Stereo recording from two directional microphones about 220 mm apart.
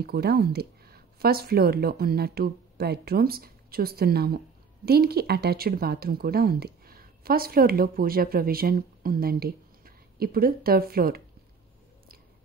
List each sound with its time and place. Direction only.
0.0 s speech: 45° right (ahead or behind)